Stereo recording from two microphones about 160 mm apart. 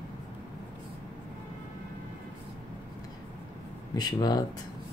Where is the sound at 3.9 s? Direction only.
25° left (ahead or behind).